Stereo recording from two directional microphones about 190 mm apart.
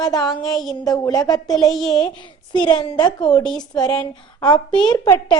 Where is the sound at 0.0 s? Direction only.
20° left (ahead or behind).